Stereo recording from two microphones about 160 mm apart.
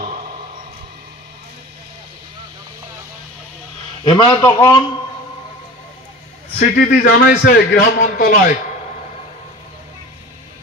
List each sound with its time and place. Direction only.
4.0 s a man's voice: 30° left (ahead or behind)
6.6 s a man's voice: 65° left (ahead or behind)